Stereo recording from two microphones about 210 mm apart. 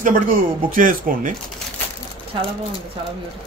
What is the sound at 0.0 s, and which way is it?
Speech, 40° right (ahead or behind).